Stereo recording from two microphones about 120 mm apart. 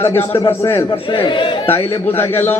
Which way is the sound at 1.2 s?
50° left (ahead or behind).